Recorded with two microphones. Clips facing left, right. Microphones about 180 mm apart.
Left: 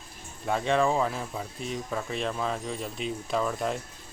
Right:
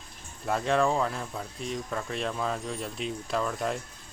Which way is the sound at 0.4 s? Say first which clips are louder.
Left 1 dB; centre (ahead or behind).